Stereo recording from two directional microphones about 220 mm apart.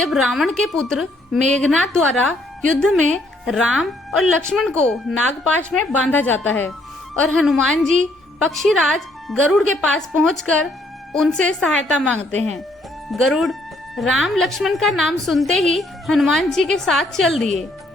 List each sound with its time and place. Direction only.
0.0 s speech: centre (ahead or behind)